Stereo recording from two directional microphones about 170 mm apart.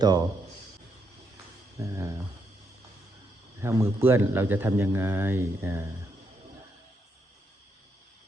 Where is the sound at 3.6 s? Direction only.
15° right (ahead or behind).